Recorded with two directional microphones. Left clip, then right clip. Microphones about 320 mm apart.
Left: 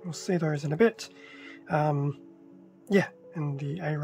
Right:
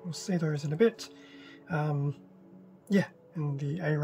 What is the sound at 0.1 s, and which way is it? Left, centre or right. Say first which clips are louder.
Speech: left 4 dB; centre.